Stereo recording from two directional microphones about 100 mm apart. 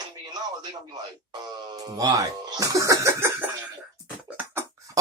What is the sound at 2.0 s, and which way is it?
Speech, 35° right (ahead or behind).